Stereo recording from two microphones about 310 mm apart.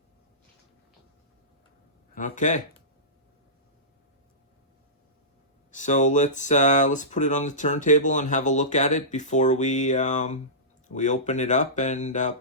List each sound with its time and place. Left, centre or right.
2.1 s speech: left
5.7 s speech: left